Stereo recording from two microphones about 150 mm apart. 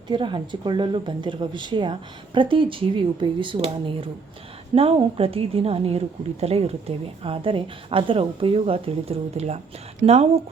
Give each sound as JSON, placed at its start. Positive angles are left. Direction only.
{"t": 0.1, "sound": "speech", "side_deg": -35}